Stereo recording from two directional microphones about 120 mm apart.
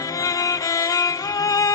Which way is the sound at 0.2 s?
30° left (ahead or behind).